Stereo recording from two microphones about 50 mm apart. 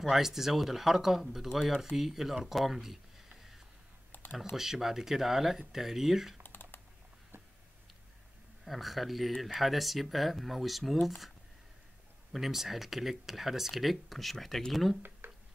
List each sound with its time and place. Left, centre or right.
0.0 s speech: centre
4.1 s computer keyboard: left
4.6 s speech: centre
6.4 s typing: left
8.6 s speech: centre
15.0 s a sound: right